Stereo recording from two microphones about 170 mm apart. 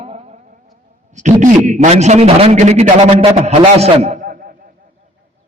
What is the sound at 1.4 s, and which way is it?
A man's voice, 45° right (ahead or behind).